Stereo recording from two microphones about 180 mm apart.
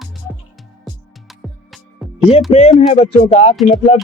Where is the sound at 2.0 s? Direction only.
Centre (ahead or behind).